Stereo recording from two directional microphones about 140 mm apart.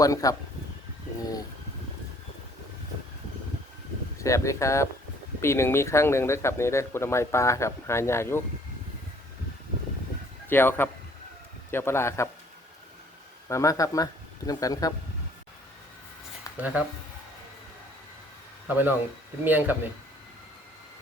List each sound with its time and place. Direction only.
0.0 s speech: 25° left (ahead or behind)
4.2 s speech: 20° left (ahead or behind)
10.5 s a man's voice: 15° left (ahead or behind)
13.5 s speech: 20° left (ahead or behind)
16.6 s speech: 10° right (ahead or behind)
18.7 s speech: 15° right (ahead or behind)